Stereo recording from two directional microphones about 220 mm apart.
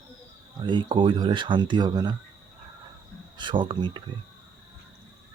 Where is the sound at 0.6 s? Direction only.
20° right (ahead or behind).